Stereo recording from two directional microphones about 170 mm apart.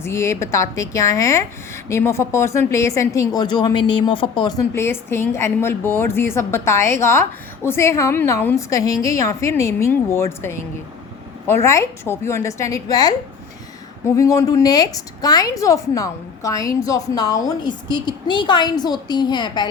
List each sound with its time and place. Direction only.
0.0 s a woman's voice: 15° left (ahead or behind)
4.7 s a woman's voice: 15° left (ahead or behind)
14.2 s a woman's voice: 20° left (ahead or behind)